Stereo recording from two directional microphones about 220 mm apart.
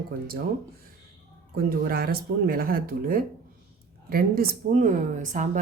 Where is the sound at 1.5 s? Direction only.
40° right (ahead or behind).